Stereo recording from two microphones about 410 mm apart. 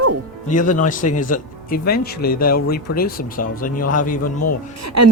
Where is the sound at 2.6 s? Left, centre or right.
Left.